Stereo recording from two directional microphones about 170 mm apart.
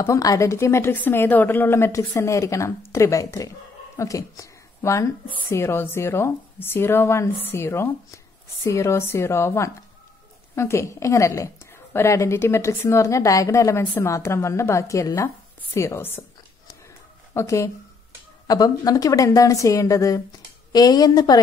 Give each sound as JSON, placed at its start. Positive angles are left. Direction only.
{"t": 0.0, "sound": "a woman's voice", "side_deg": 20}
{"t": 17.3, "sound": "a woman's voice", "side_deg": 15}